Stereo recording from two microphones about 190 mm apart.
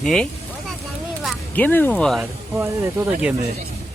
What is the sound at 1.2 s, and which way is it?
Speech, 10° left (ahead or behind).